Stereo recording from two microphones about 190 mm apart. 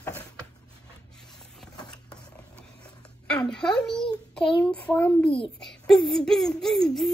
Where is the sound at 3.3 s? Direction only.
5° left (ahead or behind).